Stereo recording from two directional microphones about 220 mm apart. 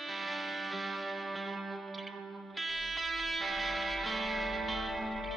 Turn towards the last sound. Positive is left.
turn(degrees=0)  # may be behind; listen again after turning